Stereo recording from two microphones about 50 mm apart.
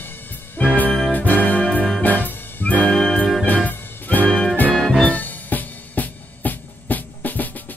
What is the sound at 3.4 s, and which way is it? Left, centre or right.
Music, left.